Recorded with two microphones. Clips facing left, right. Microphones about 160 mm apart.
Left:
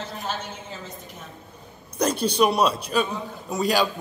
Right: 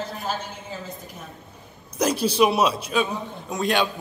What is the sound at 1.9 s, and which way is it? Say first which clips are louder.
Speech: right 1 dB; 5° right (ahead or behind).